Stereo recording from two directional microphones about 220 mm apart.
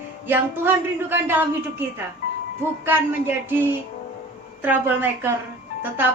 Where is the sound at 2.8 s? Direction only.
10° right (ahead or behind).